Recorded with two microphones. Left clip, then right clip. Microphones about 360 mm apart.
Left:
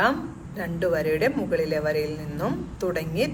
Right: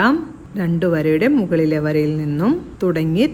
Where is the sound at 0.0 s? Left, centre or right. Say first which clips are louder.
Right 6 dB; right.